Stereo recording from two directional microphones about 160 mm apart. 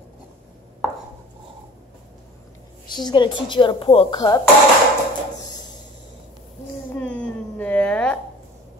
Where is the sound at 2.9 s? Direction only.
25° left (ahead or behind).